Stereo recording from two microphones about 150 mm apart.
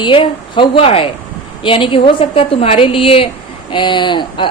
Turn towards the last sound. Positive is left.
turn(degrees=30)  # may be behind; listen again after turning